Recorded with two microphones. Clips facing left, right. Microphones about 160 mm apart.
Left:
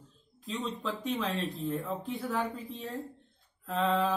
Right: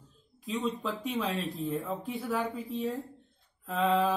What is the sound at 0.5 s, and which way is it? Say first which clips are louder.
Speech: right 3 dB; centre (ahead or behind).